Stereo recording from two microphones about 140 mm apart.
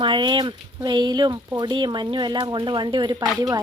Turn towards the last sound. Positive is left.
turn(degrees=-30)  # may be behind; listen again after turning